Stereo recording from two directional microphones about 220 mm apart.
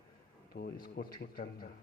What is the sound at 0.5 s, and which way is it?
Speech, 45° left (ahead or behind).